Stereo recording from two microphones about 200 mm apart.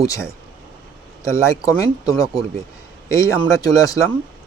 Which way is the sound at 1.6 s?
20° left (ahead or behind).